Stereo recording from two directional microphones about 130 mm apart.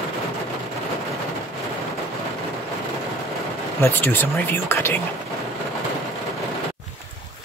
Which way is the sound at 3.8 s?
15° left (ahead or behind).